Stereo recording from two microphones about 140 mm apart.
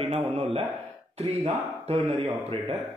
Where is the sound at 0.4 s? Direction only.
45° right (ahead or behind).